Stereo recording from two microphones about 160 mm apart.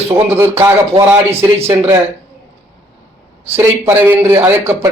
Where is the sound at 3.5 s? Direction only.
15° right (ahead or behind).